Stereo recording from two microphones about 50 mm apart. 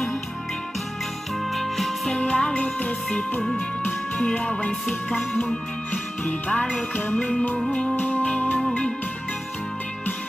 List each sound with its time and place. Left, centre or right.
1.4 s music: centre
2.1 s music: left
3.3 s music: centre
4.2 s music: left
5.9 s music: left
8.6 s music: left